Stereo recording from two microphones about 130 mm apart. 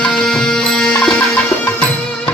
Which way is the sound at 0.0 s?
5° left (ahead or behind).